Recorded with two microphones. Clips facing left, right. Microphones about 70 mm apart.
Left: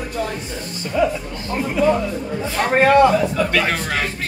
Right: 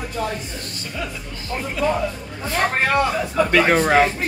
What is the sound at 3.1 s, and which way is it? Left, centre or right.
Speech, centre.